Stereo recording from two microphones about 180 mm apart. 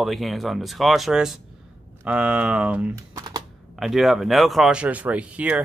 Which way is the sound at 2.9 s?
20° right (ahead or behind).